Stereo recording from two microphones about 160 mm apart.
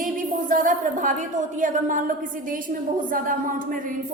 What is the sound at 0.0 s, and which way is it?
A woman's voice, 55° right (ahead or behind).